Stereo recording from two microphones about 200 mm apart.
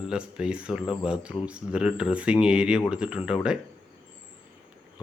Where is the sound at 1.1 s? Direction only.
5° right (ahead or behind).